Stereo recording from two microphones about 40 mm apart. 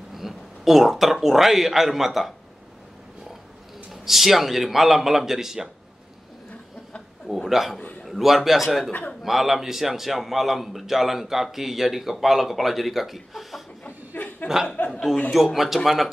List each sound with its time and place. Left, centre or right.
0.1 s speech: centre
3.9 s speech: centre
7.4 s a man's voice: centre
14.2 s chuckle: left
15.3 s a man's voice: centre